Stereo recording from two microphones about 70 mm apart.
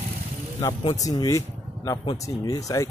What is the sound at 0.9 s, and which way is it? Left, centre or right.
Speech, left.